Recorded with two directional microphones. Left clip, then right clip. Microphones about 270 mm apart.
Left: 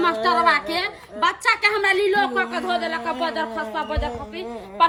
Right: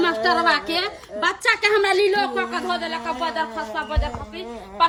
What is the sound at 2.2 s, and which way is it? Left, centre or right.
Speech, centre.